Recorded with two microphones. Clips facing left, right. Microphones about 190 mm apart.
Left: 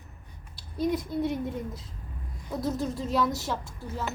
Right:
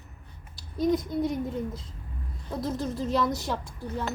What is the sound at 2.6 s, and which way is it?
Speech, centre (ahead or behind).